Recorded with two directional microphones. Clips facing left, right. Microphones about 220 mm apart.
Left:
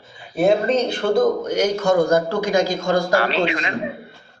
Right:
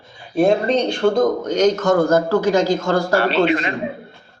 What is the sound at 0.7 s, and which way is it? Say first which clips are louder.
Speech: right 2 dB; 5° left (ahead or behind).